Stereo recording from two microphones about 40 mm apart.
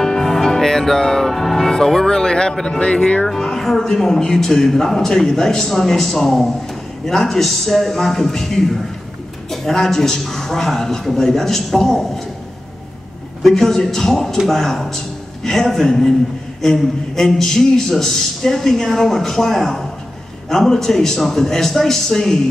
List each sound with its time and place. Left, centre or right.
0.0 s music: centre
1.3 s speech: centre
2.8 s speech: left
3.3 s a man's voice: centre
13.4 s a man's voice: centre